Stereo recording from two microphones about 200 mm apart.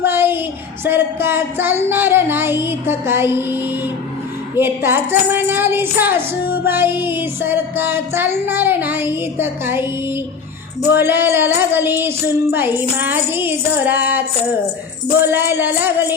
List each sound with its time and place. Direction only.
0.0 s a sound: 10° right (ahead or behind)
0.9 s speech: 10° right (ahead or behind)
10.9 s speech: 10° right (ahead or behind)